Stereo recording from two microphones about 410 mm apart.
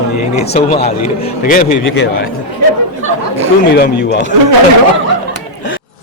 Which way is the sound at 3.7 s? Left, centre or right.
Left.